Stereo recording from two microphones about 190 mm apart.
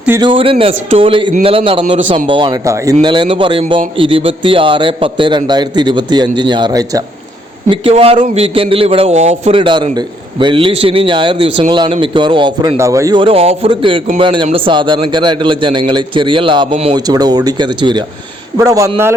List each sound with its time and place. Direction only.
0.2 s a man's voice: 25° right (ahead or behind)